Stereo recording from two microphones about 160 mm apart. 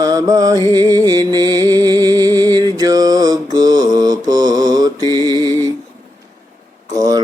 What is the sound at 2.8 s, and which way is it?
Mantra, 25° right (ahead or behind).